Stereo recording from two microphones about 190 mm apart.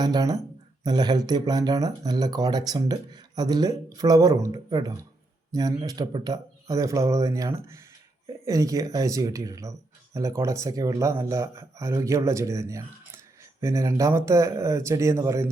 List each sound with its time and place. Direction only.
0.0 s speech: 20° right (ahead or behind)